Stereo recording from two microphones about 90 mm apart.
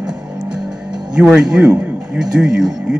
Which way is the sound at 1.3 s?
10° right (ahead or behind).